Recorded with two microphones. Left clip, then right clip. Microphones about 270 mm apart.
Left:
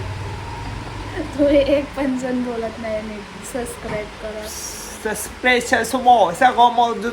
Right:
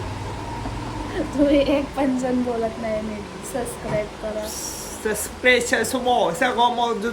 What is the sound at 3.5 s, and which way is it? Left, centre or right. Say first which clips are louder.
Speech: left 1 dB; centre.